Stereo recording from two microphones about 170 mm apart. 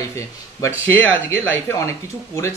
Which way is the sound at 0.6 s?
15° left (ahead or behind).